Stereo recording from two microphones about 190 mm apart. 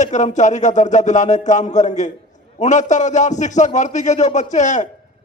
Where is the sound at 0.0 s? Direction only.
40° left (ahead or behind).